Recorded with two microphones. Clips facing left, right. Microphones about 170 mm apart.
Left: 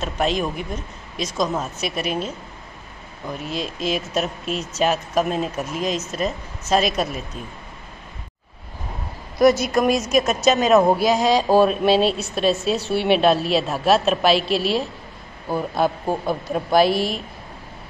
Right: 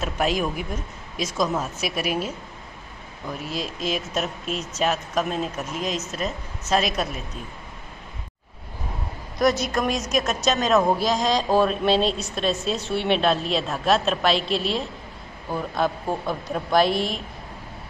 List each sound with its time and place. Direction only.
0.0 s a woman's voice: 5° right (ahead or behind)
3.4 s a woman's voice: centre (ahead or behind)
9.4 s a woman's voice: 5° left (ahead or behind)